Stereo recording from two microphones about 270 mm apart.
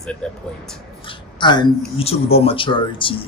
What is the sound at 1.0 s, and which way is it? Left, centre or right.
A woman's voice, centre.